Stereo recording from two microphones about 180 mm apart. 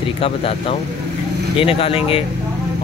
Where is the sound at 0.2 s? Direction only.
30° left (ahead or behind).